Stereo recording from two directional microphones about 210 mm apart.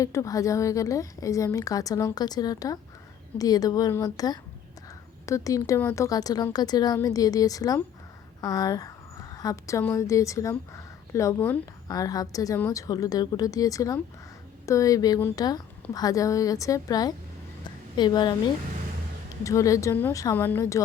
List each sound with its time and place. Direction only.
0.0 s a woman's voice: 15° left (ahead or behind)
19.5 s a woman's voice: 15° left (ahead or behind)